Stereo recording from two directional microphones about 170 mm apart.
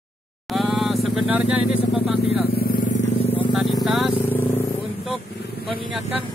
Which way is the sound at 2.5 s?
55° left (ahead or behind).